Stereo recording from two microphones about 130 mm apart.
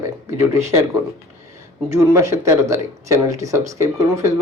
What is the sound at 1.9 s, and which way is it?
A man's voice, 25° right (ahead or behind).